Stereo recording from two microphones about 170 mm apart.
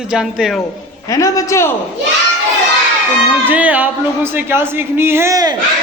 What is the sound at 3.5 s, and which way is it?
Speech, 10° right (ahead or behind).